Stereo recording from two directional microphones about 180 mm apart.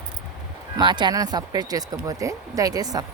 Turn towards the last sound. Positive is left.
turn(degrees=-20)  # may be behind; listen again after turning